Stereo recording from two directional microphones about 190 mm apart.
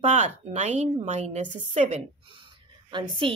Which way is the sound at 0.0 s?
40° right (ahead or behind).